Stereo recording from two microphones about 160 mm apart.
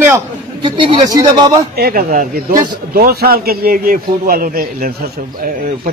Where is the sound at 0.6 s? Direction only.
30° right (ahead or behind).